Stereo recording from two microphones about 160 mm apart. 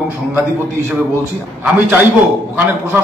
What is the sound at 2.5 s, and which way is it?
Speech, 10° right (ahead or behind).